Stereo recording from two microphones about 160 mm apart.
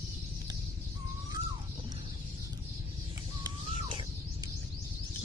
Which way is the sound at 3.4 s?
30° right (ahead or behind).